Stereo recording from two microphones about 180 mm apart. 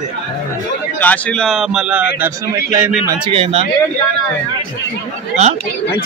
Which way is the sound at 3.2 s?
30° right (ahead or behind).